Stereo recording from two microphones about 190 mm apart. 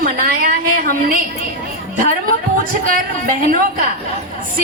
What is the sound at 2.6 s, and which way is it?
A woman's voice, 50° right (ahead or behind).